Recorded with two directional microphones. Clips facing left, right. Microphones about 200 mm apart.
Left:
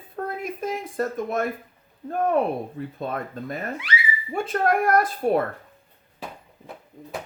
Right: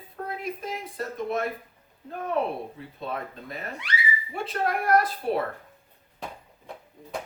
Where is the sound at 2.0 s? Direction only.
50° left (ahead or behind).